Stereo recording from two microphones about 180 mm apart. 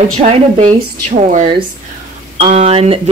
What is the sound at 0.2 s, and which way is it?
Speech, 40° right (ahead or behind).